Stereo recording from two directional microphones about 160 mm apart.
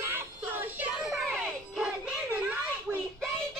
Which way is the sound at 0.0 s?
15° right (ahead or behind).